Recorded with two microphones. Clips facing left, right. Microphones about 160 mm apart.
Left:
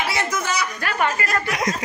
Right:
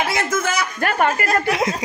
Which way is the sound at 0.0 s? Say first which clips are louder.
Right 3 dB; 50° right (ahead or behind).